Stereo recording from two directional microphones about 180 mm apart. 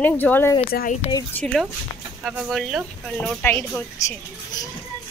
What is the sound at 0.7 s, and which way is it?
Speech, 50° left (ahead or behind).